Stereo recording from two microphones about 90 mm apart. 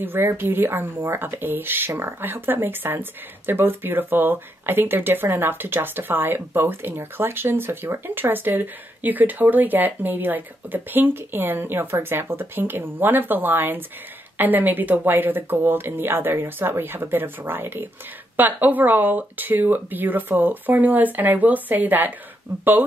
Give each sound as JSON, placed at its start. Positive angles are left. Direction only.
{"t": 0.0, "sound": "speech", "side_deg": -25}